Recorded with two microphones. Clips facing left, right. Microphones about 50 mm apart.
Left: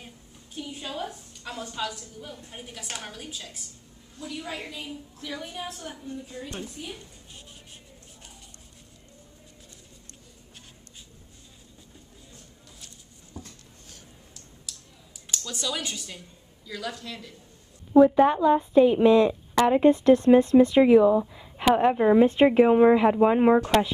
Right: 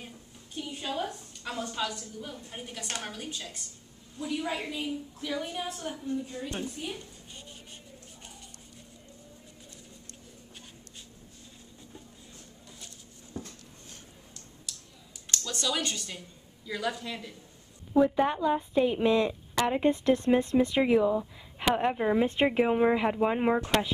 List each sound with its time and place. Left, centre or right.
0.6 s a woman's voice: centre
4.2 s a woman's voice: centre
14.7 s computer keyboard: centre
15.3 s speech: centre
16.6 s speech: centre
18.0 s speech: left
21.5 s speech: left
22.6 s speech: left